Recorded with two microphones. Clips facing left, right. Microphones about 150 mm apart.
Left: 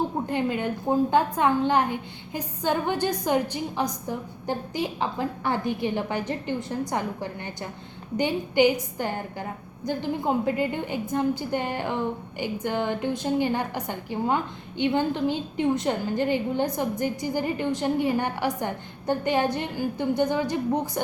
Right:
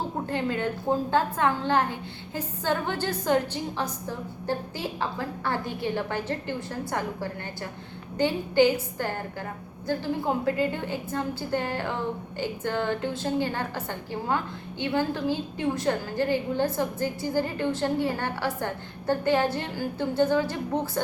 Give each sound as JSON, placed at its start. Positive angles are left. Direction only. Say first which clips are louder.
{"t": 0.3, "sound": "a woman's voice", "louder": "left 2 dB", "side_deg": 15}